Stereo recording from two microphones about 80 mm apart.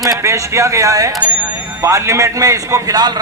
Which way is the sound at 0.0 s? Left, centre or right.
Right.